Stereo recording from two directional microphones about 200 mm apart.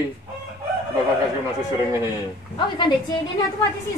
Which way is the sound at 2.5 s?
25° left (ahead or behind).